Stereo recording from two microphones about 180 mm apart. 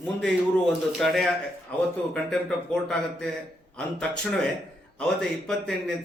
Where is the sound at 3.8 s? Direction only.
5° left (ahead or behind).